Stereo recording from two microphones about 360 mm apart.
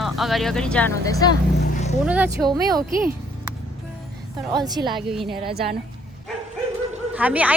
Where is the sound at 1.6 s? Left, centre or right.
Left.